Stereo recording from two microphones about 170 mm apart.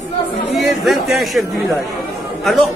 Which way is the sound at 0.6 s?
Centre (ahead or behind).